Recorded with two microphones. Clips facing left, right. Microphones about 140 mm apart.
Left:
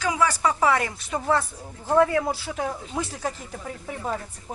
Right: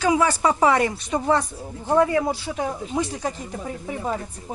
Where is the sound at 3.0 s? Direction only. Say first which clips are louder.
Right 3 dB; centre (ahead or behind).